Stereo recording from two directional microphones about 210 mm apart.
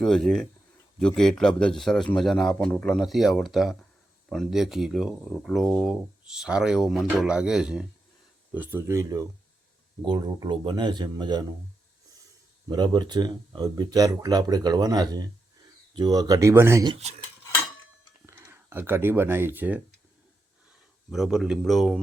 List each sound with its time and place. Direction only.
0.0 s speech: centre (ahead or behind); by 11.4 s 20° right (ahead or behind)
12.6 s speech: 20° right (ahead or behind)
18.3 s speech: 10° right (ahead or behind)
21.1 s speech: centre (ahead or behind)